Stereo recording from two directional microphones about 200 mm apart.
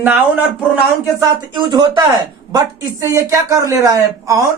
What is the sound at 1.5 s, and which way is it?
Speech, 20° right (ahead or behind).